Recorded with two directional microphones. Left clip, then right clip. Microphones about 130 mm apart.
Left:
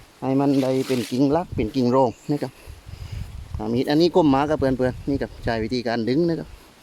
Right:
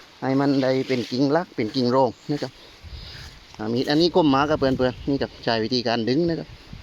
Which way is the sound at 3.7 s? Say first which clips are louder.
Left 1 dB; 30° left (ahead or behind).